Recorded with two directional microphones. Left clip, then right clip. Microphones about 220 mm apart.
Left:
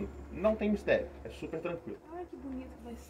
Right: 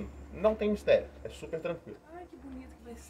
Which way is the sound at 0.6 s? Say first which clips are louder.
Right 4 dB; 60° right (ahead or behind).